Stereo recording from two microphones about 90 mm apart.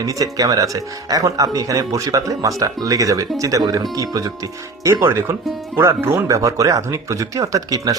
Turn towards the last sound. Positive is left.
turn(degrees=-40)  # may be behind; listen again after turning